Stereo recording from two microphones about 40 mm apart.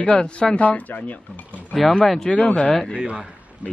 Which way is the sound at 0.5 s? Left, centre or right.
Left.